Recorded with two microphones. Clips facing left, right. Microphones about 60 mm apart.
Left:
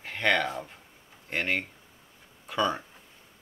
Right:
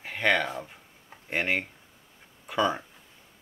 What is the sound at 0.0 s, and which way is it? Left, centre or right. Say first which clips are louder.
Speech: right 1 dB; centre.